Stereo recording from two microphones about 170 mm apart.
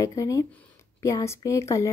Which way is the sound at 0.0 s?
20° left (ahead or behind).